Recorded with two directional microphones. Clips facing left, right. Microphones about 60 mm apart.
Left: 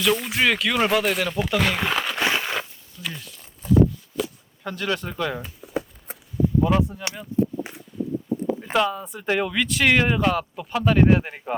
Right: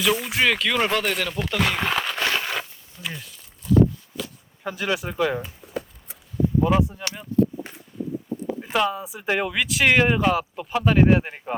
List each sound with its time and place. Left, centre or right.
0.0 s speech: centre
2.2 s a sound: centre
2.9 s speech: right
3.6 s a sound: left
4.6 s speech: centre
6.1 s a sound: left
6.6 s speech: centre
7.3 s speech: left
8.7 s speech: centre